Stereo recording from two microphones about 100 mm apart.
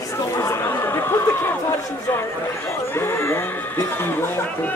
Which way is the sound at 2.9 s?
25° left (ahead or behind).